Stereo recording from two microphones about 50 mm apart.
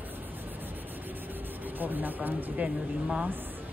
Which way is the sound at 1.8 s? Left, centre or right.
Right.